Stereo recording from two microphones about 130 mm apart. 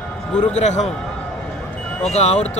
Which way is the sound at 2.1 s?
55° left (ahead or behind).